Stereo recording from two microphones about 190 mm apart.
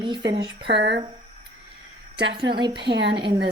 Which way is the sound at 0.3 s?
20° right (ahead or behind).